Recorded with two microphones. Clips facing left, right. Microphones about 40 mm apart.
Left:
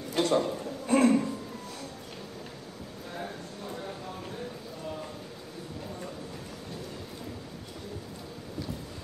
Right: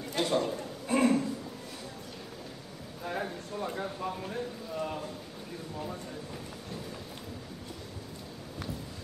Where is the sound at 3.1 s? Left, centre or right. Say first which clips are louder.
Right 4 dB; right.